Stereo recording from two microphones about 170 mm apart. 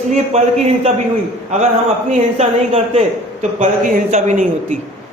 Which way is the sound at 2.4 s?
35° right (ahead or behind).